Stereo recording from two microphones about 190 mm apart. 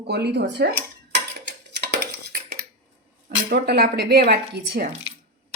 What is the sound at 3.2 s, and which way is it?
Speech, 55° right (ahead or behind).